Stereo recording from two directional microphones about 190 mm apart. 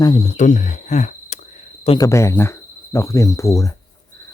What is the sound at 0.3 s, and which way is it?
Speech, 40° left (ahead or behind).